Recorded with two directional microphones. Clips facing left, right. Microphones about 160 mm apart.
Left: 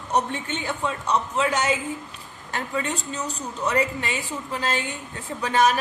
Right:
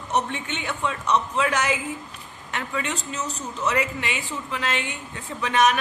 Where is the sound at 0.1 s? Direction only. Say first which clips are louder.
Left 1 dB; 35° left (ahead or behind).